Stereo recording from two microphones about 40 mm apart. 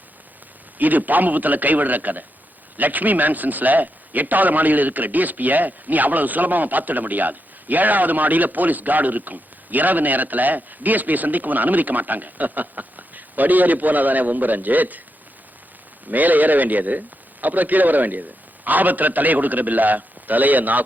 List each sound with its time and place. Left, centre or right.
0.8 s a man's voice: right
16.0 s a man's voice: right